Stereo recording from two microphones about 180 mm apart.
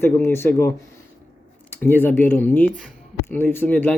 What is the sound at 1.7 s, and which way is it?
Speech, 10° left (ahead or behind).